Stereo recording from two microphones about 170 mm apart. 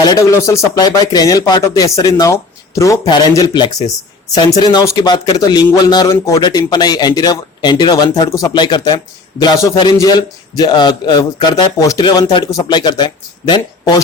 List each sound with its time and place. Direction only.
0.0 s speech: 20° left (ahead or behind)